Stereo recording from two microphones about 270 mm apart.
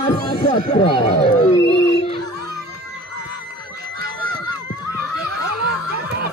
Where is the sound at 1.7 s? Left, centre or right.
Left.